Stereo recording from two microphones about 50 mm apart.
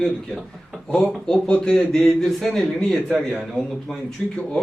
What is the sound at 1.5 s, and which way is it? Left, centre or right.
Speech, left.